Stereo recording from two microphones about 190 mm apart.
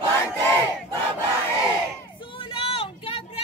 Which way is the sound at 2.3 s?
30° left (ahead or behind).